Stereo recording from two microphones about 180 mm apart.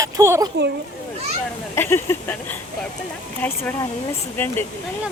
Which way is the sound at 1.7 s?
15° left (ahead or behind).